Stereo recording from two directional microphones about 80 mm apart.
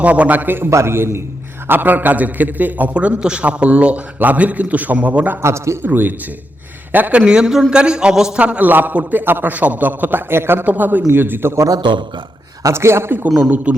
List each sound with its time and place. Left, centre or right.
0.0 s a man's voice: centre
5.4 s a man's voice: right
5.8 s a man's voice: right
11.8 s a man's voice: right
12.6 s a man's voice: right; by 13.8 s centre